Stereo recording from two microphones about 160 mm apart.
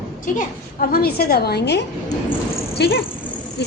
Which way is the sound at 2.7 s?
90° left.